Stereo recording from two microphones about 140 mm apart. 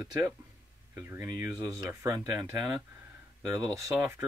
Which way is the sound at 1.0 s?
20° right (ahead or behind).